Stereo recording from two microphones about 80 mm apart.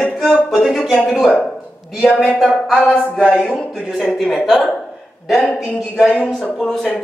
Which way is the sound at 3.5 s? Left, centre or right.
Centre.